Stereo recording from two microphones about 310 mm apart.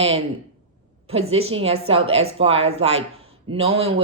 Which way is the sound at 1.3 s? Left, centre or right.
Centre.